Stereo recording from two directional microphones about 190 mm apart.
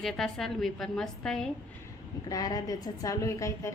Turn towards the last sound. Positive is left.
turn(degrees=15)  # may be behind; listen again after turning